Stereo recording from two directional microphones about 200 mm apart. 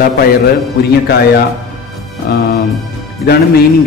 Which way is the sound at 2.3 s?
55° left (ahead or behind).